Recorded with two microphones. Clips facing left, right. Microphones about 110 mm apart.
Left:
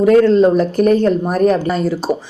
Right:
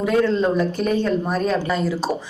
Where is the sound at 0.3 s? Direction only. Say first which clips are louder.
Left 8 dB; 65° left (ahead or behind).